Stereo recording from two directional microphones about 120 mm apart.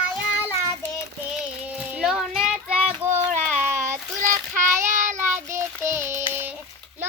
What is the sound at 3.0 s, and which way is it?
Child singing, 15° right (ahead or behind).